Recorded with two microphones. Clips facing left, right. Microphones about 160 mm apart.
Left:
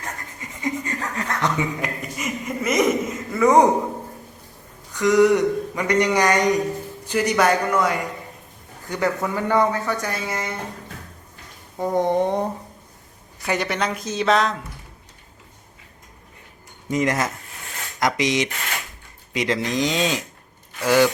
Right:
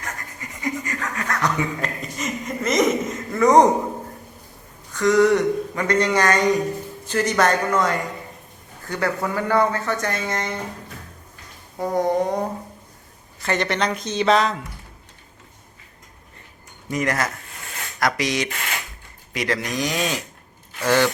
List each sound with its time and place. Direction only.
0.0 s chuckle: 25° left (ahead or behind)
1.8 s chuckle: 10° left (ahead or behind)
4.9 s speech: 15° left (ahead or behind)
11.8 s speech: 25° left (ahead or behind)
13.4 s speech: 10° left (ahead or behind)
16.9 s speech: 20° left (ahead or behind)